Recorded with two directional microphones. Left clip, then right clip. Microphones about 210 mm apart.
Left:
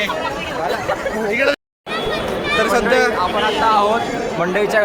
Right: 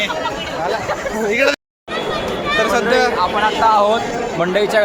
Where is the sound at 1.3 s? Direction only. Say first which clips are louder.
Right 2 dB; 45° right (ahead or behind).